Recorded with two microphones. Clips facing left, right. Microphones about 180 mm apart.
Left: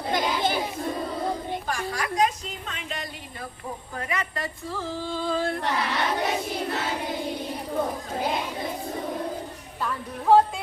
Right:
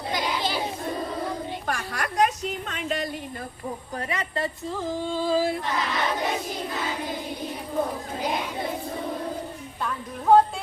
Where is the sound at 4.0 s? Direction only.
30° right (ahead or behind).